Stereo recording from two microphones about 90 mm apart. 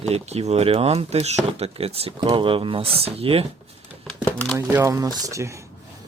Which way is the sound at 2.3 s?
80° right.